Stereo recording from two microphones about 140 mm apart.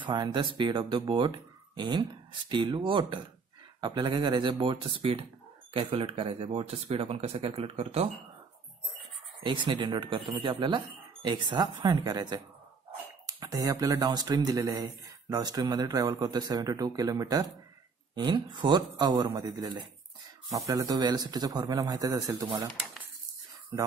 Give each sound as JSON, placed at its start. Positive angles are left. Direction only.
{"t": 0.0, "sound": "a man's voice", "side_deg": -35}
{"t": 9.4, "sound": "a man's voice", "side_deg": -35}